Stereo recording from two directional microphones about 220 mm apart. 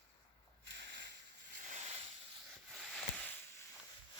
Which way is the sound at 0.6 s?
50° right (ahead or behind).